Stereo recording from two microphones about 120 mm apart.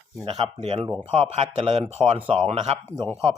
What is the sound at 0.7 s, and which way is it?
Speech, 40° right (ahead or behind).